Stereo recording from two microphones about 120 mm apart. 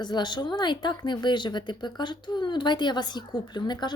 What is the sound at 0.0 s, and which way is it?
A woman's voice, 35° left (ahead or behind).